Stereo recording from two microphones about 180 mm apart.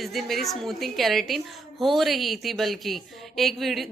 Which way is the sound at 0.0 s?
Centre (ahead or behind).